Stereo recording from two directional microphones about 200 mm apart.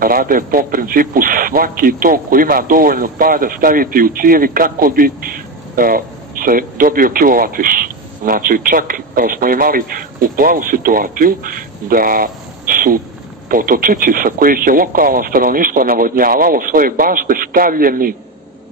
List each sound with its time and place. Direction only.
0.0 s a man's voice: 45° right (ahead or behind)